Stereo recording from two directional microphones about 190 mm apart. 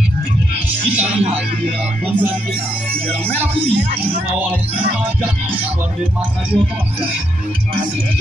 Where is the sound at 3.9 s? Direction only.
10° right (ahead or behind).